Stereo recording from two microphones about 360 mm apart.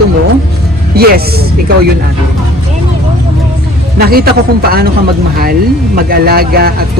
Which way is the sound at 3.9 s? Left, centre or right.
Right.